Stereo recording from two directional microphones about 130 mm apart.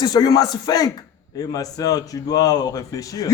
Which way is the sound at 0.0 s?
30° left (ahead or behind).